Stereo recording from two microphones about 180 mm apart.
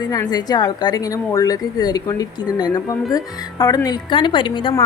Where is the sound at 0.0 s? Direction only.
20° left (ahead or behind).